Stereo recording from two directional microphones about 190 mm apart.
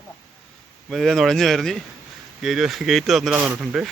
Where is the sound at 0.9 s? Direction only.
Centre (ahead or behind).